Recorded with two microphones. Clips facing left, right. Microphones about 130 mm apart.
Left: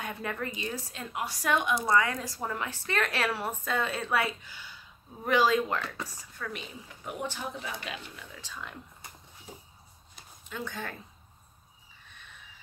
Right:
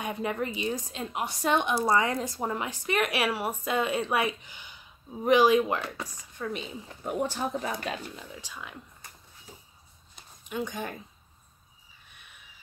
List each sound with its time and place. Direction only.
0.0 s speech: 20° right (ahead or behind); by 8.0 s 45° right (ahead or behind)
8.4 s speech: 10° right (ahead or behind)
10.5 s speech: 15° right (ahead or behind)
12.1 s a sound: 10° right (ahead or behind)